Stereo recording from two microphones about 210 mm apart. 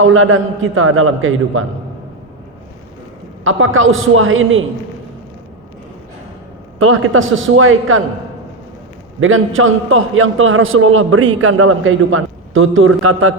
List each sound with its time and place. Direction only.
0.0 s a man's voice: 75° right (ahead or behind)
3.4 s a man's voice: 70° right (ahead or behind)
6.7 s a man's voice: 80° right
9.2 s a man's voice: 70° right (ahead or behind); by 13.3 s 90° right